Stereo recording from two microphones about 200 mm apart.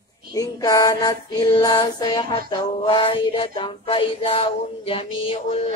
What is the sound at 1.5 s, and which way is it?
Music, 20° left (ahead or behind).